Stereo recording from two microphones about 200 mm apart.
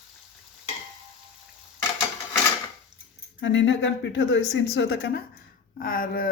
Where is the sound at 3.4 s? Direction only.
65° left (ahead or behind).